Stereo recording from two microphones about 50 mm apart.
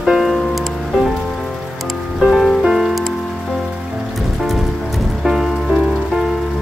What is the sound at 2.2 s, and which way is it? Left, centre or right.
Music, centre.